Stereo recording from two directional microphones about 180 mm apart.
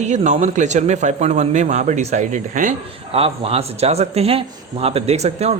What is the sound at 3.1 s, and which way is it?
Speech, 30° right (ahead or behind).